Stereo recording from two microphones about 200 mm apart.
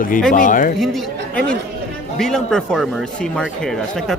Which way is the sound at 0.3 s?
40° left (ahead or behind).